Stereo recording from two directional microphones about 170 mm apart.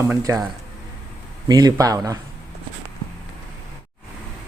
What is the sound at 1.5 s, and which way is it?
Speech, 25° right (ahead or behind).